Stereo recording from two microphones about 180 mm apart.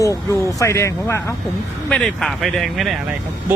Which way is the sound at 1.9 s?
5° left (ahead or behind).